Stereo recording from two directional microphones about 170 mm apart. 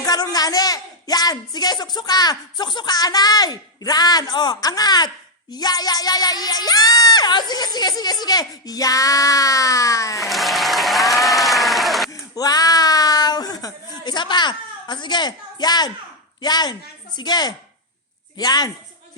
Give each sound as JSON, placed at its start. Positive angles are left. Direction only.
{"t": 0.0, "sound": "speech", "side_deg": 20}
{"t": 10.2, "sound": "applause", "side_deg": 0}
{"t": 12.1, "sound": "a sound", "side_deg": 20}
{"t": 16.4, "sound": "speech", "side_deg": 25}